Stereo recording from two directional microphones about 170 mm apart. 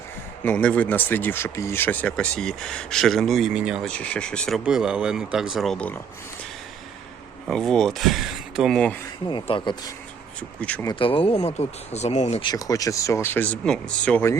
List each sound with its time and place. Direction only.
0.4 s speech: 10° left (ahead or behind)
3.8 s speech: 5° left (ahead or behind)
7.4 s speech: 5° left (ahead or behind)
9.2 s speech: 30° left (ahead or behind)
12.4 s speech: 25° left (ahead or behind)